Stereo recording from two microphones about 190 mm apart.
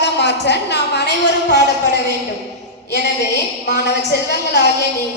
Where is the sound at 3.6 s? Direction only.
60° left (ahead or behind).